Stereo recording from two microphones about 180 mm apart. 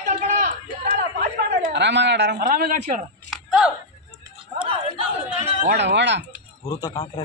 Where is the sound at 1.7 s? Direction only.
75° right (ahead or behind); by 3.0 s 50° right (ahead or behind).